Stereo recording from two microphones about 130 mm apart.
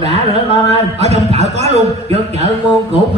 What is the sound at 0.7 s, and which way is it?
A woman's voice, 55° right (ahead or behind).